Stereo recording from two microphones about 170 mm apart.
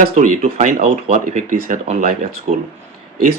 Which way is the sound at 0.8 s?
40° right (ahead or behind).